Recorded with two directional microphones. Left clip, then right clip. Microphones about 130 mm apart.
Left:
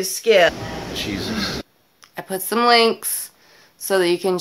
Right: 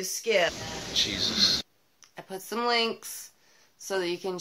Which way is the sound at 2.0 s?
35° left (ahead or behind).